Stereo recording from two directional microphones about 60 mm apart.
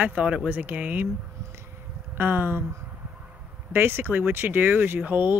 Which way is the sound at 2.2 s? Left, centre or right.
Right.